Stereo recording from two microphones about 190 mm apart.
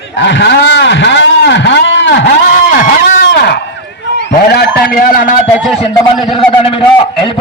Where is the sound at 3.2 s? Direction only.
65° left (ahead or behind).